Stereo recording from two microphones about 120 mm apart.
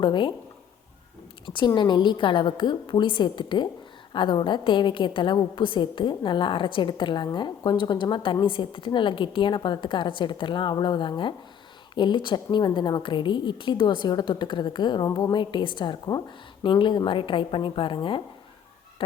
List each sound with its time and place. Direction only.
0.0 s a woman's voice: 40° left (ahead or behind)
1.5 s a woman's voice: 40° left (ahead or behind)